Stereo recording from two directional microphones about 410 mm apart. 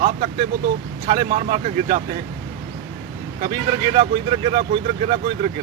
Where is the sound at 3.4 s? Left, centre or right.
Centre.